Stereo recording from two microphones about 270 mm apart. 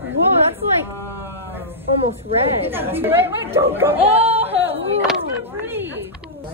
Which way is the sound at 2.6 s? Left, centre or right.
Centre.